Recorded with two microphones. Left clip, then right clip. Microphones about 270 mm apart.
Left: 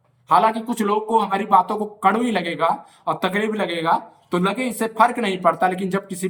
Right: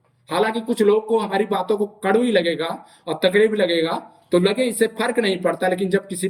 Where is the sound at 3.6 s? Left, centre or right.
Left.